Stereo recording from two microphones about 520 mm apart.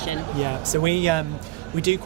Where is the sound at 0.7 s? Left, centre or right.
Right.